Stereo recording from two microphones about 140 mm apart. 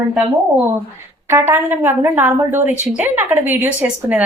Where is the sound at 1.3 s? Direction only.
15° right (ahead or behind).